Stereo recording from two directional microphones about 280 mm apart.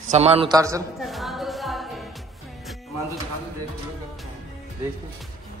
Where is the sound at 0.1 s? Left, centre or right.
Right.